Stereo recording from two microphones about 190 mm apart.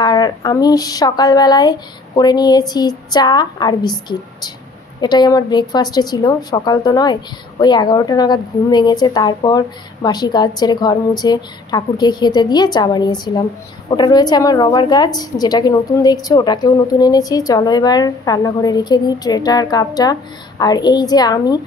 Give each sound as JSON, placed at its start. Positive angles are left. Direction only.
{"t": 0.0, "sound": "a woman's voice", "side_deg": 20}
{"t": 5.0, "sound": "a woman's voice", "side_deg": 20}